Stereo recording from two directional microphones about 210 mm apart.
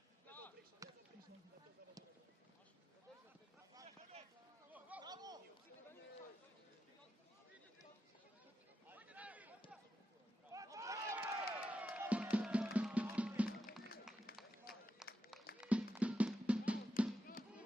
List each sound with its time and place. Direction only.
0.3 s basketball bounce: 10° left (ahead or behind)
0.8 s basketball bounce: 15° right (ahead or behind)
3.8 s a sound: 30° right (ahead or behind)
4.7 s a sound: 5° right (ahead or behind)
5.0 s chatter: 20° right (ahead or behind)
8.9 s a sound: 5° right (ahead or behind)
10.5 s music: 15° right (ahead or behind)
14.3 s run: 45° left (ahead or behind)
15.0 s run: 5° right (ahead or behind)
15.6 s music: 5° right (ahead or behind)